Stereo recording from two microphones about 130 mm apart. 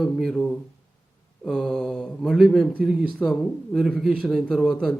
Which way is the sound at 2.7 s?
10° right (ahead or behind).